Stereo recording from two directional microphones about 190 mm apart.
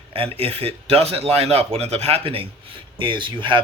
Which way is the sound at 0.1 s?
30° right (ahead or behind).